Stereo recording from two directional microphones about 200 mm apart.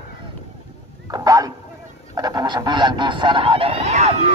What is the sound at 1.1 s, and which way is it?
Speech, 20° right (ahead or behind).